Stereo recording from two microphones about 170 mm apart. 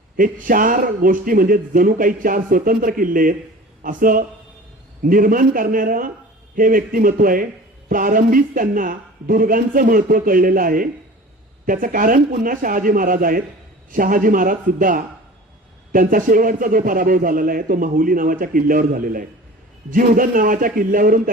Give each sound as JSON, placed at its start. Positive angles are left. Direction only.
{"t": 0.2, "sound": "a man's voice", "side_deg": -55}